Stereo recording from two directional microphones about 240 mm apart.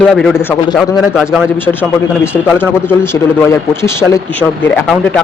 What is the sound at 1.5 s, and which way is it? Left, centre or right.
A man's voice, centre.